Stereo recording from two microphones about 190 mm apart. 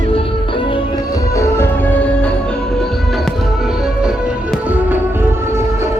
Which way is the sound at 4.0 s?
5° right (ahead or behind).